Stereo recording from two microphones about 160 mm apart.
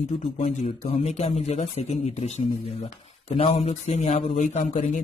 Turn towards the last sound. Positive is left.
turn(degrees=45)  # may be behind; listen again after turning